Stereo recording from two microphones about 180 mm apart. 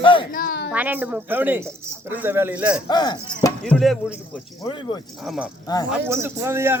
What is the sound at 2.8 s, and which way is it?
Speech, 25° left (ahead or behind).